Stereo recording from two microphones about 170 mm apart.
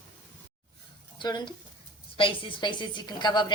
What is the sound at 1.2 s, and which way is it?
A woman's voice, 25° left (ahead or behind).